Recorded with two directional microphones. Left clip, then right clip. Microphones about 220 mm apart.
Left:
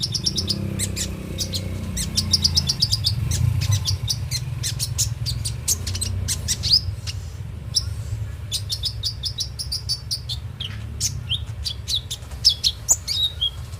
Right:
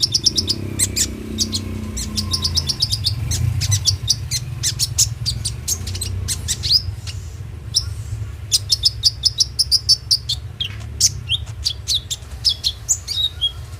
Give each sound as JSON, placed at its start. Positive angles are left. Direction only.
{"t": 0.0, "sound": "bird", "side_deg": -20}
{"t": 2.0, "sound": "bird", "side_deg": 5}
{"t": 3.6, "sound": "bird", "side_deg": -20}
{"t": 5.8, "sound": "chirp", "side_deg": 5}
{"t": 7.7, "sound": "a sound", "side_deg": -5}
{"t": 8.4, "sound": "chirp", "side_deg": -25}
{"t": 12.4, "sound": "chirp", "side_deg": 5}